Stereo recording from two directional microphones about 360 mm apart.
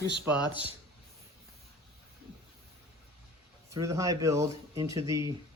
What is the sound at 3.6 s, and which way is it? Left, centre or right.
Speech, centre.